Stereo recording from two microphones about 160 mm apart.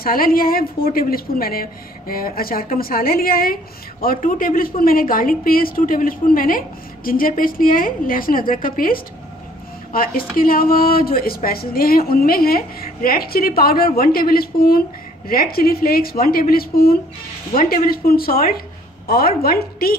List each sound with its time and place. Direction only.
0.0 s a woman's voice: 65° left (ahead or behind)